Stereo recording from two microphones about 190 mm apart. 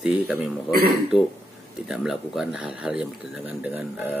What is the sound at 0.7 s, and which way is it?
Speech, 50° right (ahead or behind).